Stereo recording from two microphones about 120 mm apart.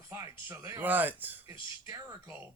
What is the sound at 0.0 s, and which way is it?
Speech, 25° right (ahead or behind).